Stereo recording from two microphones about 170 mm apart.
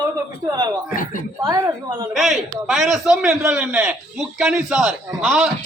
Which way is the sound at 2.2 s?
Centre (ahead or behind).